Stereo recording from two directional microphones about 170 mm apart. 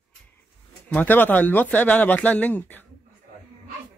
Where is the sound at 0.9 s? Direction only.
10° left (ahead or behind).